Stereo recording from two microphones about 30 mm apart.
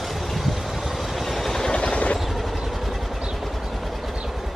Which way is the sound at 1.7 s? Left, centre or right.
Left.